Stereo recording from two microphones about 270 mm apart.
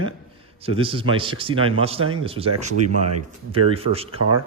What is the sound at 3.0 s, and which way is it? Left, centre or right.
Speech, right.